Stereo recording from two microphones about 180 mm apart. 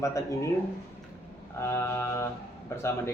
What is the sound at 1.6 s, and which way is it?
Speech, 15° left (ahead or behind).